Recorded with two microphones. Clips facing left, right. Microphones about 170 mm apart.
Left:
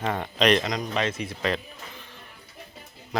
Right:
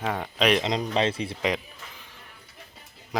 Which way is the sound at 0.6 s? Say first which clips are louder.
Right 3 dB; 30° right (ahead or behind).